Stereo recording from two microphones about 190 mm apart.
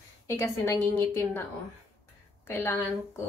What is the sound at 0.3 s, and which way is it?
A woman's voice, 15° left (ahead or behind).